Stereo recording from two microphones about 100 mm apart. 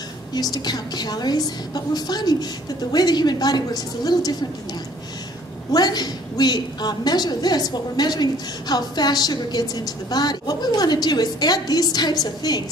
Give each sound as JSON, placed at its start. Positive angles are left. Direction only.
{"t": 0.3, "sound": "a woman's voice", "side_deg": 40}
{"t": 5.7, "sound": "a woman's voice", "side_deg": 45}